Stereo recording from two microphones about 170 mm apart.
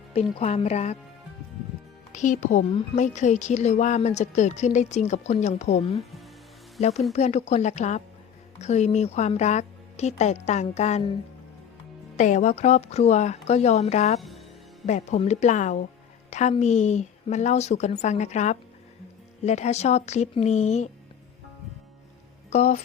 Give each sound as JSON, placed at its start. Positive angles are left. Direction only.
{"t": 0.1, "sound": "speech", "side_deg": 35}
{"t": 2.1, "sound": "a woman's voice", "side_deg": 45}
{"t": 6.0, "sound": "music", "side_deg": 0}
{"t": 7.1, "sound": "a woman's voice", "side_deg": 40}
{"t": 12.1, "sound": "speech", "side_deg": 45}
{"t": 14.2, "sound": "music", "side_deg": 0}
{"t": 14.8, "sound": "a woman's voice", "side_deg": 45}
{"t": 22.4, "sound": "speech", "side_deg": 45}